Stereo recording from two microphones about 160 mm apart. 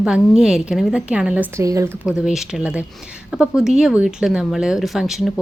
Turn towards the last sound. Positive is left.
turn(degrees=0)  # may be behind; listen again after turning